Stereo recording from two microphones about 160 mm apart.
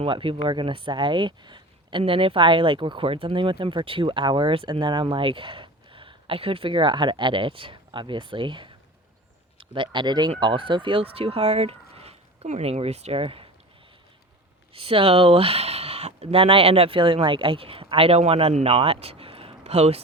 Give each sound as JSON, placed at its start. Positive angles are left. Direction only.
{"t": 0.0, "sound": "speech", "side_deg": -35}
{"t": 14.7, "sound": "speech", "side_deg": -35}